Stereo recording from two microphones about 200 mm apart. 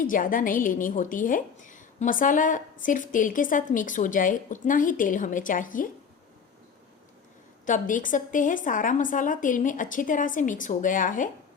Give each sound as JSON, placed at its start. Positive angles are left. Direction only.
{"t": 0.0, "sound": "a woman's voice", "side_deg": 45}
{"t": 7.6, "sound": "a woman's voice", "side_deg": 40}